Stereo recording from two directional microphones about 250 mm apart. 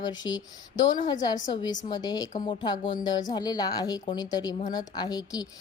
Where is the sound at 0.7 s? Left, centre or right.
Left.